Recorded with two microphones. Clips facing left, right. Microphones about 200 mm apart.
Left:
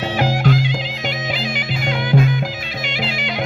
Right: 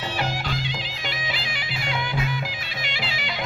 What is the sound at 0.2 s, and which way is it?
Music, 50° left (ahead or behind).